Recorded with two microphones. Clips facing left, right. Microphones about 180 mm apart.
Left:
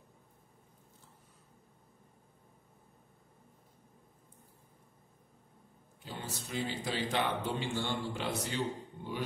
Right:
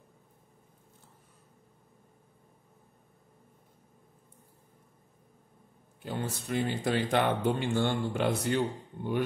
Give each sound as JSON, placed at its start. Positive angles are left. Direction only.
{"t": 6.0, "sound": "speech", "side_deg": -55}